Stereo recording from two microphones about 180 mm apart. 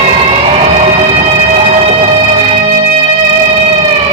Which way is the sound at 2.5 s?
35° right (ahead or behind).